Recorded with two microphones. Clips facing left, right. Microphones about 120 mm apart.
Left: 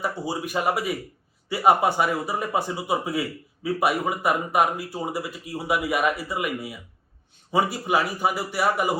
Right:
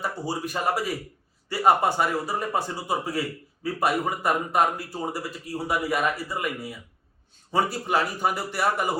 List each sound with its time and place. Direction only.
0.0 s speech: 10° left (ahead or behind)